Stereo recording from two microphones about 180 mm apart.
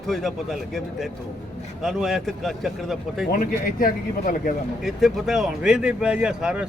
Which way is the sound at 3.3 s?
50° left (ahead or behind).